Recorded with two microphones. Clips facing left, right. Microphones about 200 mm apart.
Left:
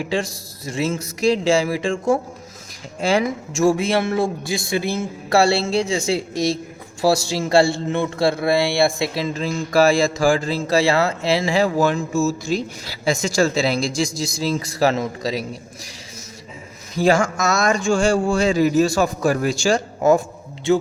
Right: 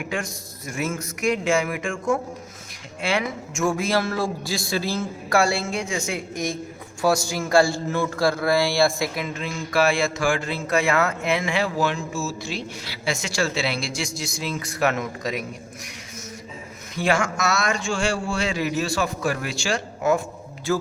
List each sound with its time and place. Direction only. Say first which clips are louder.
0.6 s a man's voice: left 5 dB; 30° left (ahead or behind)
6.3 s a woman's voice: left 5 dB; 80° left
7.0 s a man's voice: left 3 dB; 30° left (ahead or behind)
16.9 s speech: left 6 dB; 40° left (ahead or behind)
20.7 s a man's voice: left 6 dB; 25° left (ahead or behind)